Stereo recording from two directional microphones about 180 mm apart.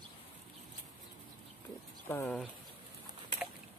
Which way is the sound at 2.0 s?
10° left (ahead or behind).